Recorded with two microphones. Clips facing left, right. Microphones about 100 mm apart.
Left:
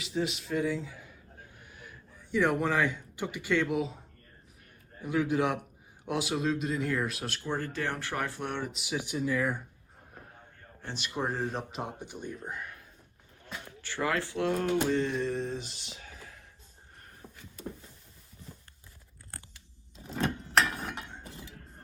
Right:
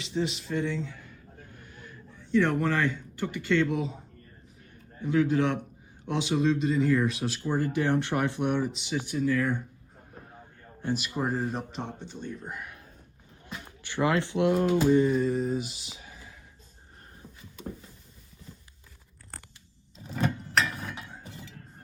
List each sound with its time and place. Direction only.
0.0 s speech: centre (ahead or behind)
5.0 s speech: 10° left (ahead or behind)
7.6 s speech: 15° right (ahead or behind)
8.6 s speech: centre (ahead or behind)
9.0 s speech: 15° left (ahead or behind)
10.8 s speech: 5° right (ahead or behind); by 12.3 s 15° left (ahead or behind)
12.4 s speech: centre (ahead or behind)
13.7 s speech: 20° right (ahead or behind)
17.2 s a sound: 20° left (ahead or behind)